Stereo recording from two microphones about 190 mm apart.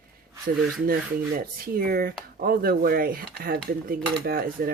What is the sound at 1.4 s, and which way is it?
Cutlery, 50° right (ahead or behind).